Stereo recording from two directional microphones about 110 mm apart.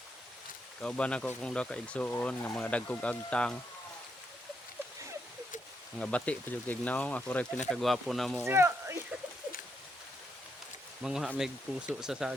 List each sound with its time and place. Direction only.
0.8 s speech: 10° left (ahead or behind)
6.0 s speech: 10° left (ahead or behind)
7.7 s speech: centre (ahead or behind)
8.4 s speech: 25° right (ahead or behind)
11.0 s speech: 5° right (ahead or behind)